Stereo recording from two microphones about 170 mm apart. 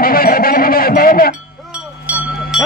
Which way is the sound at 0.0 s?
60° left (ahead or behind).